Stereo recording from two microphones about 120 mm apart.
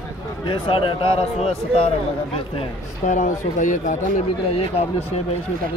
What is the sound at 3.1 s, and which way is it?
Speech, 90° left.